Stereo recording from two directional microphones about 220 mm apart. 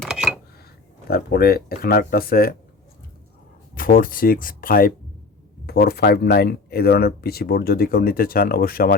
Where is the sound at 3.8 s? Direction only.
40° left (ahead or behind).